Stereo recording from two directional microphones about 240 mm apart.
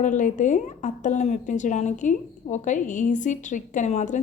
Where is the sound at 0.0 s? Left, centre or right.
Left.